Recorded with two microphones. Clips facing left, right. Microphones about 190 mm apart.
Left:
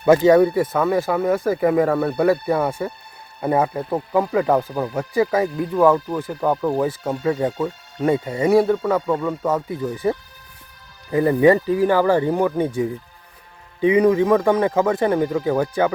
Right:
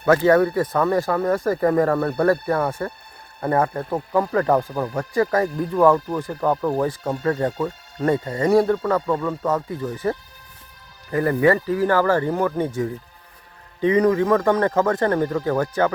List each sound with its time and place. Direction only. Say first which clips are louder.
0.0 s speech: left 3 dB; 15° left (ahead or behind)